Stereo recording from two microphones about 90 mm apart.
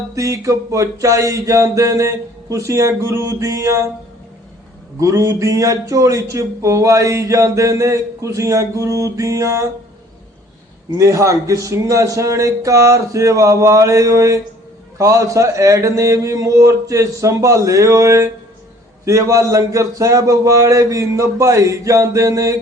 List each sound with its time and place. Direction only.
0.1 s a man's voice: 35° right (ahead or behind)
4.9 s a man's voice: 40° right (ahead or behind)
10.9 s a man's voice: 35° right (ahead or behind)